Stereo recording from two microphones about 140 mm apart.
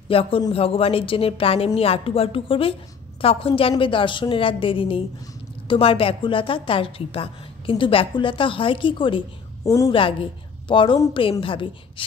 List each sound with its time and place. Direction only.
0.1 s a woman's voice: 40° left (ahead or behind)